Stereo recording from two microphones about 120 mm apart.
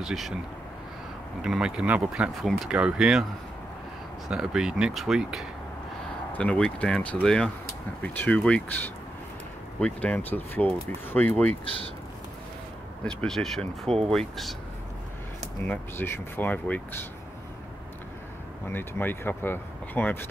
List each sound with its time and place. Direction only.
0.0 s speech: centre (ahead or behind)
1.4 s speech: 5° right (ahead or behind)
4.3 s speech: 5° right (ahead or behind)
6.3 s speech: 10° left (ahead or behind)
11.6 s speech: 50° left (ahead or behind)
13.0 s speech: 5° left (ahead or behind)
13.6 s speech: 55° right (ahead or behind)
14.1 s speech: centre (ahead or behind)
15.6 s speech: 15° left (ahead or behind)
18.7 s speech: 15° left (ahead or behind)